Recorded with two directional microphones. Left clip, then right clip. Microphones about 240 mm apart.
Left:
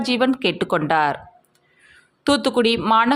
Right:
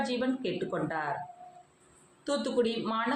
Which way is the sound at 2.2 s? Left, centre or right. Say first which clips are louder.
Left 11 dB; left.